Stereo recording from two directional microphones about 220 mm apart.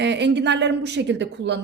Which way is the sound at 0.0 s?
50° right (ahead or behind).